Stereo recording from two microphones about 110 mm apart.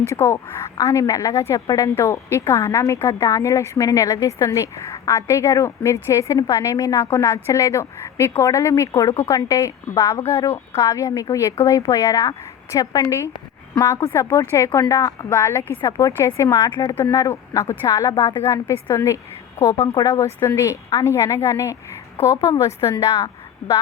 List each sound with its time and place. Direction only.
0.2 s a woman's voice: 25° left (ahead or behind)
16.6 s speech: 45° left (ahead or behind)
17.0 s a woman's voice: 30° left (ahead or behind)